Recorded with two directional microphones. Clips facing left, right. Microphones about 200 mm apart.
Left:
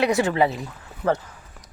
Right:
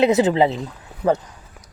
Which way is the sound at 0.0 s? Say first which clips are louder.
Right 4 dB; 20° right (ahead or behind).